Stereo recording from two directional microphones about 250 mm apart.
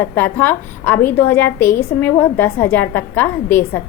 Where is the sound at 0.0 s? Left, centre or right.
Centre.